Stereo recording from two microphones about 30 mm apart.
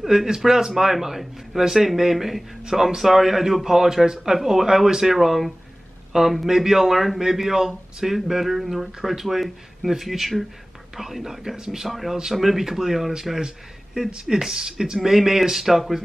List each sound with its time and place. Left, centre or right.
0.0 s speech: centre
14.0 s speech: right